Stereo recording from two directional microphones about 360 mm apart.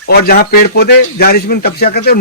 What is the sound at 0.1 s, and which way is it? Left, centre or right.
A man's voice, left.